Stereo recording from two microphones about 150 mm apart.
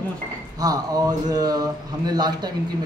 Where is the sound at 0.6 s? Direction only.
25° right (ahead or behind).